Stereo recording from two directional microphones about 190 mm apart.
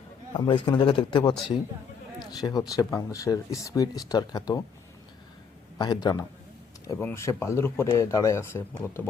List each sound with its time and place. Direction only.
0.3 s speech: 25° left (ahead or behind)
5.7 s speech: 20° left (ahead or behind)